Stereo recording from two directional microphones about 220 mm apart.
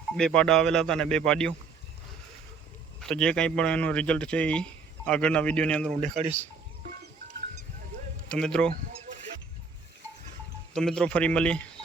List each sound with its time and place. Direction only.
0.2 s speech: 5° left (ahead or behind)
3.0 s speech: 5° left (ahead or behind)
5.9 s speech: 30° right (ahead or behind)
8.3 s speech: 5° left (ahead or behind)
10.8 s speech: 5° left (ahead or behind)